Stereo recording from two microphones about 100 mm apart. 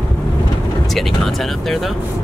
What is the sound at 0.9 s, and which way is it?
Speech, 5° left (ahead or behind).